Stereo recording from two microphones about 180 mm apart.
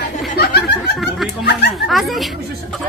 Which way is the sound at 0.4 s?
65° left (ahead or behind).